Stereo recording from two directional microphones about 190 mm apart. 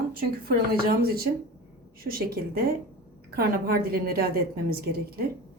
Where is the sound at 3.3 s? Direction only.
55° right (ahead or behind).